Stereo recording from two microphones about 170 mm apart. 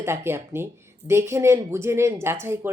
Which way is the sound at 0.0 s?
15° right (ahead or behind).